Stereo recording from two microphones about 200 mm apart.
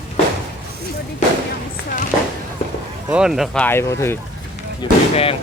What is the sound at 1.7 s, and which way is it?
Speech, 45° left (ahead or behind).